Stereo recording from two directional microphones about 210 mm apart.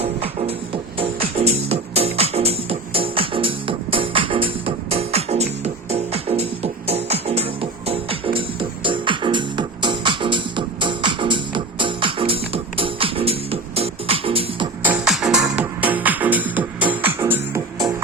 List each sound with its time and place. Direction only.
0.0 s music: 30° right (ahead or behind)
14.8 s music: 5° right (ahead or behind)